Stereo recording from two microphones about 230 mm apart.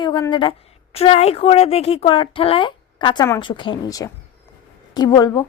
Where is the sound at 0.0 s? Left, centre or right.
Centre.